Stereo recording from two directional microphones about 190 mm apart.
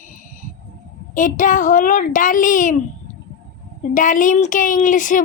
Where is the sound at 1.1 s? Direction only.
45° left (ahead or behind).